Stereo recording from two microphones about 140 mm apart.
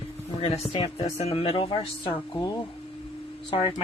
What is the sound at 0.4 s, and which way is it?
Speech, 45° left (ahead or behind).